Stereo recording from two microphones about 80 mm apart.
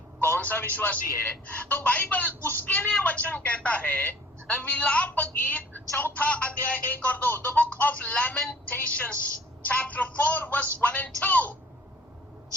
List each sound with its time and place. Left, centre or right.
0.3 s a woman's voice: left